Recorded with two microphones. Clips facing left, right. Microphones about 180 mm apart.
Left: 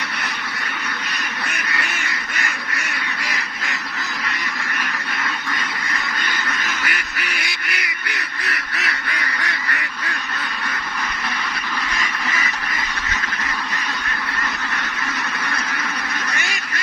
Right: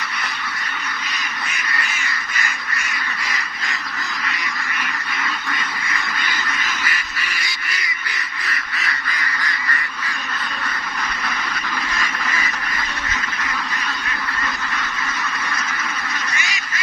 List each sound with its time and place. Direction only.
1.5 s duck: 65° left (ahead or behind)
6.8 s goose: 70° left (ahead or behind)